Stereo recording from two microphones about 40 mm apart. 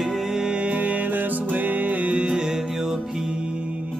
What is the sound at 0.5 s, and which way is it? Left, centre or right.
Music, right.